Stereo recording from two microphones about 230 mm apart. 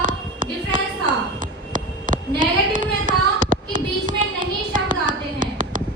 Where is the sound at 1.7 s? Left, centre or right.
Right.